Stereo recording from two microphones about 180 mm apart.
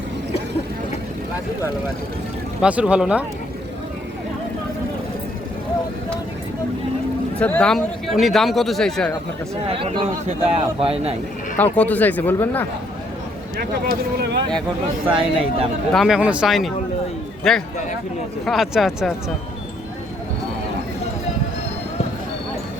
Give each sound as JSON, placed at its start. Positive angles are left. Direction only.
{"t": 2.6, "sound": "speech", "side_deg": -5}
{"t": 7.3, "sound": "speech", "side_deg": 10}
{"t": 9.6, "sound": "speech", "side_deg": -30}
{"t": 11.5, "sound": "speech", "side_deg": 10}
{"t": 13.6, "sound": "speech", "side_deg": -60}
{"t": 15.0, "sound": "speech", "side_deg": -30}
{"t": 15.9, "sound": "speech", "side_deg": 0}